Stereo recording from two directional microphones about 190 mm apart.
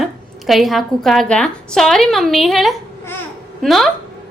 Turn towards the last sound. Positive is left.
turn(degrees=0)  # may be behind; listen again after turning